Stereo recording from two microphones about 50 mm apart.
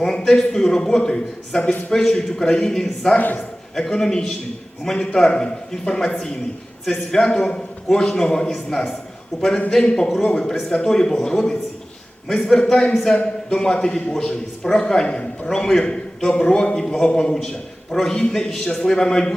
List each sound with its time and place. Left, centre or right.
0.3 s a man's voice: centre
3.2 s a man's voice: left
3.8 s a man's voice: centre
9.7 s a man's voice: centre